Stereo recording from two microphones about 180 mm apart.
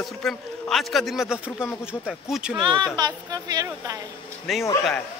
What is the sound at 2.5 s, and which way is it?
Speech, 25° right (ahead or behind).